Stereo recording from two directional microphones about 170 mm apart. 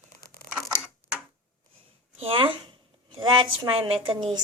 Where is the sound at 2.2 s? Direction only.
35° right (ahead or behind).